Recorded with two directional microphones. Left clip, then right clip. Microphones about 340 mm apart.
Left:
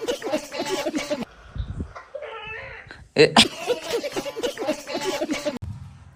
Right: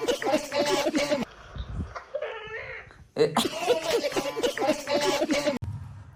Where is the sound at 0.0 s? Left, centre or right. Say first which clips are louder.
Right 1 dB; centre.